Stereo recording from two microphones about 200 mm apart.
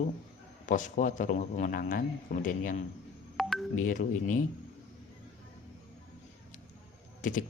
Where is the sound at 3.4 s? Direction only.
Centre (ahead or behind).